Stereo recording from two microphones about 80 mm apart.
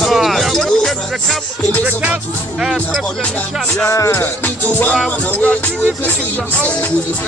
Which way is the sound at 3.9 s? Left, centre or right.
Left.